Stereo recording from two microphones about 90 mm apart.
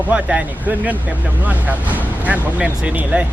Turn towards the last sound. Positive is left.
turn(degrees=-15)  # may be behind; listen again after turning